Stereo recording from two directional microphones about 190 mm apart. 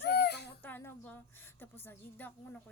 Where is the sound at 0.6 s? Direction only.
10° left (ahead or behind).